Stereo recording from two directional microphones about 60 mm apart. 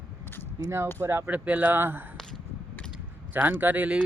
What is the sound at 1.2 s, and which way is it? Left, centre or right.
Speech, right.